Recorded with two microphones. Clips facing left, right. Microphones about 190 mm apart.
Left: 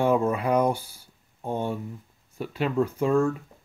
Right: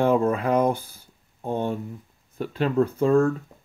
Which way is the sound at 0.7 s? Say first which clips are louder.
Right 2 dB; 55° right (ahead or behind).